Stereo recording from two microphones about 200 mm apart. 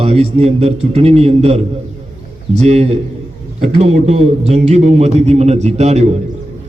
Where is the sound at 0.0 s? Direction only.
30° right (ahead or behind).